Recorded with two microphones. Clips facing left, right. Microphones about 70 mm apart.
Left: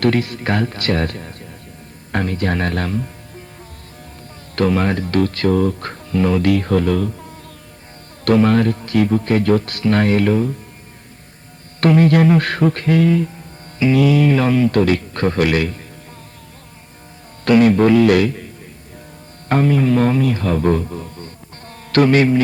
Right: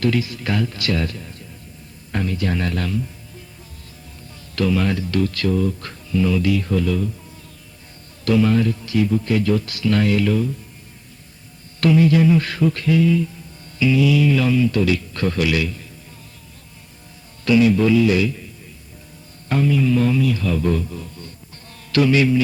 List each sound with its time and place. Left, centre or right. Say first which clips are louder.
0.0 s speech: left 4 dB; left
4.5 s speech: left 3 dB; left
11.8 s speech: left 2 dB; left
17.4 s a man's voice: left 3 dB; left